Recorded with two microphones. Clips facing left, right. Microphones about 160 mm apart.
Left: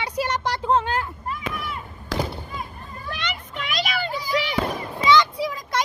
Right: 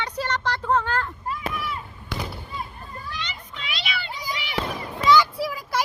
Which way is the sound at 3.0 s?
60° left (ahead or behind).